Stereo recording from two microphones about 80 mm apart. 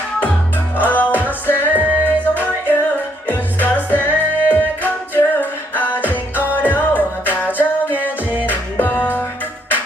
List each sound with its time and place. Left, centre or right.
0.8 s music: left
1.7 s music: centre
2.0 s music: left